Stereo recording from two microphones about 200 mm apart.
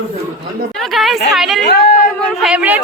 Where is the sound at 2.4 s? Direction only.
5° right (ahead or behind).